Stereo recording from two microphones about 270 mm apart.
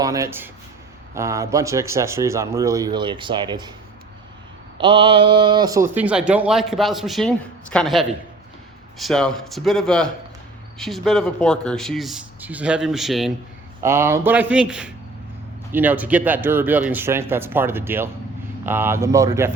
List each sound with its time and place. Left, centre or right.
0.0 s speech: centre
4.8 s speech: centre